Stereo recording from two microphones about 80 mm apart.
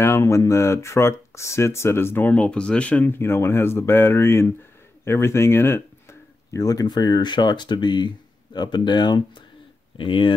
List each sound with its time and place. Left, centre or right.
0.0 s speech: left; by 3.2 s centre
3.2 s speech: left
5.0 s a sound: left
6.6 s speech: left
9.9 s speech: left